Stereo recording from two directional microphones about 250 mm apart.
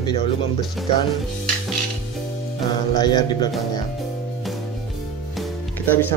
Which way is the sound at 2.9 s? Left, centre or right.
Centre.